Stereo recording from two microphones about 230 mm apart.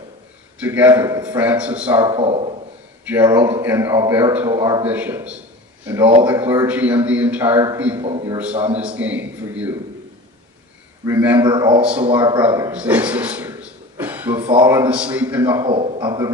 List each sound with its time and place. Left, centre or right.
0.6 s a man's voice: centre
3.1 s a man's voice: centre
8.8 s a man's voice: centre
11.1 s a man's voice: centre
15.6 s a man's voice: right